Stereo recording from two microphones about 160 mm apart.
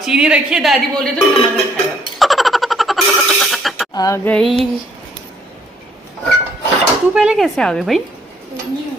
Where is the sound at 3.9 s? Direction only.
25° left (ahead or behind).